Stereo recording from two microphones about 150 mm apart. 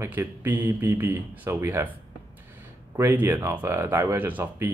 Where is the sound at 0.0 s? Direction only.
15° right (ahead or behind).